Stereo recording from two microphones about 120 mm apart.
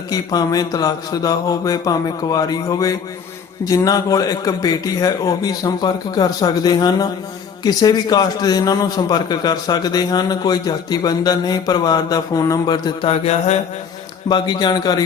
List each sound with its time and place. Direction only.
0.1 s a man's voice: 30° left (ahead or behind)
13.1 s mantra: 60° left (ahead or behind)
14.3 s a man's voice: 40° left (ahead or behind)